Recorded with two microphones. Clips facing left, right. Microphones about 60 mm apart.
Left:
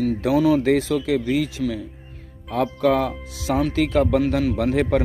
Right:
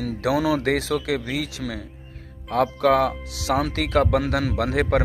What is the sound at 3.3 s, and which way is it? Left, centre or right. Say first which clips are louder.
Speech: left 1 dB; right.